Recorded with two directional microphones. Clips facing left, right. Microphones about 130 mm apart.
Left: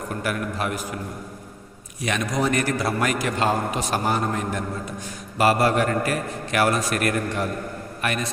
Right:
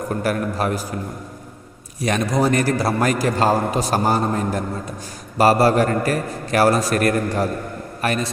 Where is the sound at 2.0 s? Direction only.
35° right (ahead or behind).